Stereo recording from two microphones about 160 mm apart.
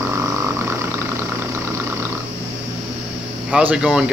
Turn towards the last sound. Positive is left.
turn(degrees=-5)  # may be behind; listen again after turning